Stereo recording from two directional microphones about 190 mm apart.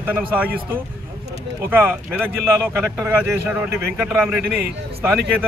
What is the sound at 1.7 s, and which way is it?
A man's voice, 10° right (ahead or behind).